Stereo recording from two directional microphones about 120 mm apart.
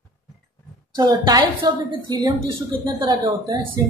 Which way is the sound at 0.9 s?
35° right (ahead or behind).